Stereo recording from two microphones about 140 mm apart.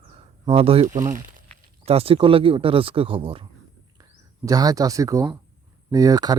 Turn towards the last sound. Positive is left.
turn(degrees=-25)  # may be behind; listen again after turning